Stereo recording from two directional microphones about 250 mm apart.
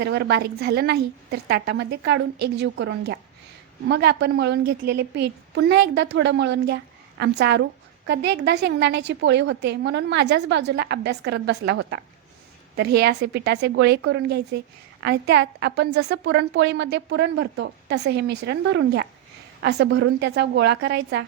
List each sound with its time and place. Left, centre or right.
0.0 s a woman's voice: right